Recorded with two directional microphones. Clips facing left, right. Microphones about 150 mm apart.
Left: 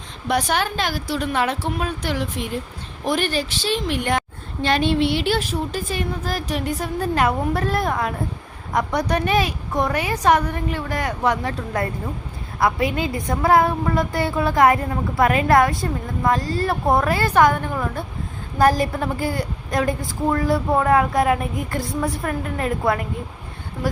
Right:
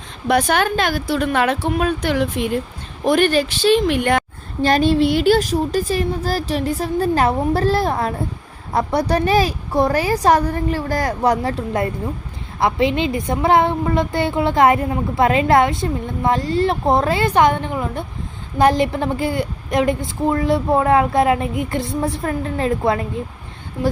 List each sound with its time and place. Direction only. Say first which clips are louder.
0.3 s a woman's voice: right 5 dB; 60° right (ahead or behind)
4.6 s a woman's voice: right 4 dB; 40° right (ahead or behind); by 23.0 s 25° right (ahead or behind)